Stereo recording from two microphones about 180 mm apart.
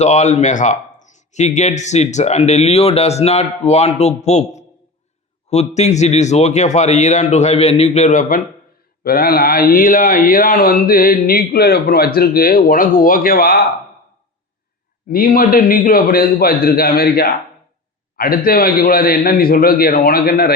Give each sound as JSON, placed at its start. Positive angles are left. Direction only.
{"t": 0.0, "sound": "speech", "side_deg": 40}
{"t": 15.1, "sound": "speech", "side_deg": 55}